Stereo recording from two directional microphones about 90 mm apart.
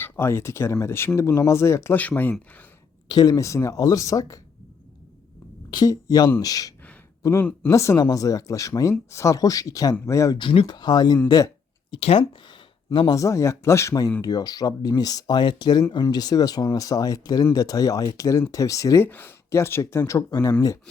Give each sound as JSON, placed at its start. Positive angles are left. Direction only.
{"t": 0.0, "sound": "speech", "side_deg": 25}
{"t": 2.0, "sound": "speech", "side_deg": 20}
{"t": 3.1, "sound": "speech", "side_deg": 45}
{"t": 5.7, "sound": "speech", "side_deg": 45}
{"t": 10.3, "sound": "speech", "side_deg": 75}
{"t": 10.7, "sound": "speech", "side_deg": 55}
{"t": 11.9, "sound": "speech", "side_deg": 65}
{"t": 12.5, "sound": "a sound", "side_deg": 65}
{"t": 13.1, "sound": "speech", "side_deg": 35}
{"t": 14.2, "sound": "speech", "side_deg": 45}
{"t": 19.0, "sound": "speech", "side_deg": 20}